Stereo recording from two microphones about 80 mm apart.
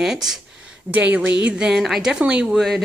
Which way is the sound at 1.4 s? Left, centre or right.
Centre.